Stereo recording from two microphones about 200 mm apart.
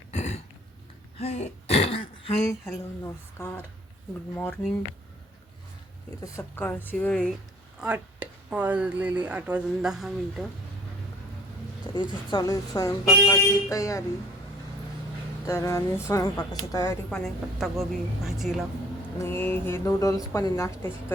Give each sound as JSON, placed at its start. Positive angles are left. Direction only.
{"t": 0.1, "sound": "throat clearing", "side_deg": 35}
{"t": 2.7, "sound": "speech", "side_deg": 15}
{"t": 6.2, "sound": "speech", "side_deg": 10}
{"t": 7.8, "sound": "speech", "side_deg": -5}
{"t": 11.9, "sound": "speech", "side_deg": 20}
{"t": 15.4, "sound": "speech", "side_deg": 15}
{"t": 17.1, "sound": "speech", "side_deg": 5}
{"t": 19.2, "sound": "speech", "side_deg": 10}